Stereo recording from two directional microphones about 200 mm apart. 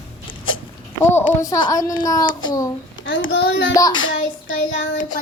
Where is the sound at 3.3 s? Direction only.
60° left (ahead or behind).